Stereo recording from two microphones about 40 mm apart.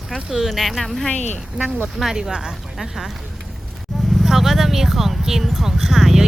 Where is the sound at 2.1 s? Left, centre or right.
Centre.